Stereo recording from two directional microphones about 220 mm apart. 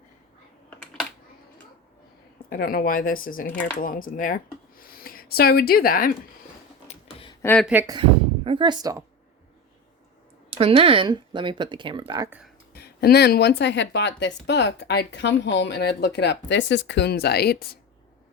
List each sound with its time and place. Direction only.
2.5 s speech: 40° left (ahead or behind)
6.8 s a sound: 25° left (ahead or behind)
7.4 s speech: 5° left (ahead or behind)
7.7 s speech: 10° right (ahead or behind)
8.4 s speech: 20° right (ahead or behind)
10.5 s speech: 25° right (ahead or behind)
12.7 s speech: 45° left (ahead or behind)